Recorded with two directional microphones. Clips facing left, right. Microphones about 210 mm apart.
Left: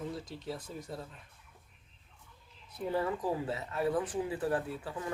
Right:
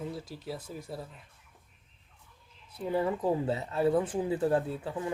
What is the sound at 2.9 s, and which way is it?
Speech, 20° right (ahead or behind).